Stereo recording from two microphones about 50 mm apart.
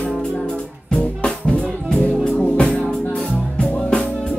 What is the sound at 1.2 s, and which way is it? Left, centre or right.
Music, centre.